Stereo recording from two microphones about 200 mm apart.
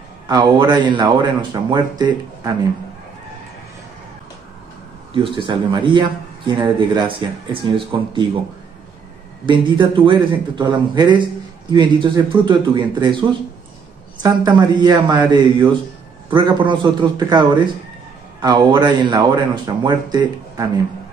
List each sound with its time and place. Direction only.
0.3 s speech: 20° right (ahead or behind)
5.1 s speech: 25° right (ahead or behind)
9.5 s speech: 25° right (ahead or behind)